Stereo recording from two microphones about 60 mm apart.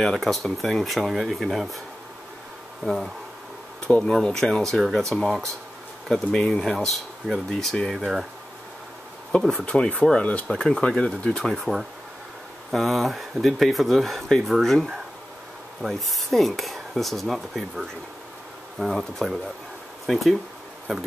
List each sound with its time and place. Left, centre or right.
0.0 s speech: centre
2.8 s speech: centre
6.6 s speech: centre
9.4 s speech: centre
9.7 s speech: centre
11.7 s speech: centre